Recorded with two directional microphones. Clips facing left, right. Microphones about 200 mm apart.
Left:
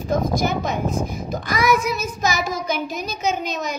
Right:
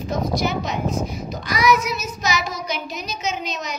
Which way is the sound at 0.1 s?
50° left (ahead or behind).